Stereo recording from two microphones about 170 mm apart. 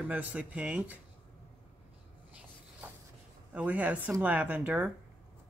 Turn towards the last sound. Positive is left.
turn(degrees=-5)  # may be behind; listen again after turning